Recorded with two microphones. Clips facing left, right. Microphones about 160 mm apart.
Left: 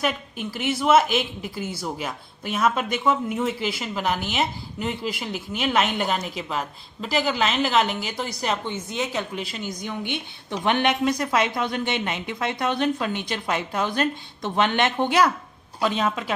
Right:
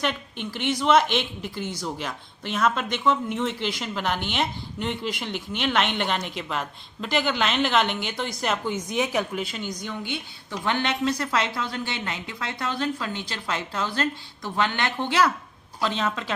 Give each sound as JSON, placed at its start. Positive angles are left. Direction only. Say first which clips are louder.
{"t": 0.0, "sound": "a woman's voice", "louder": "left 2 dB", "side_deg": 5}
{"t": 8.7, "sound": "speech", "louder": "right 2 dB", "side_deg": -15}
{"t": 9.3, "sound": "a woman's voice", "louder": "right 1 dB", "side_deg": 0}
{"t": 10.0, "sound": "a woman's voice", "louder": "left 2 dB", "side_deg": 20}